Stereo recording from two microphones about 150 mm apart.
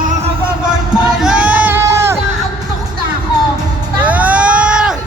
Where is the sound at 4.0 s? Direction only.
10° right (ahead or behind).